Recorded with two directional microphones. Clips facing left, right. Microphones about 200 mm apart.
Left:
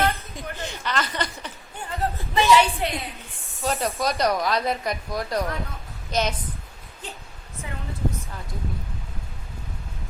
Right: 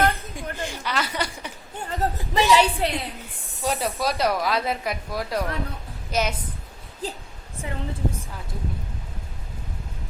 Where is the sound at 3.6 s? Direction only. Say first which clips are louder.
Even; 5° right (ahead or behind).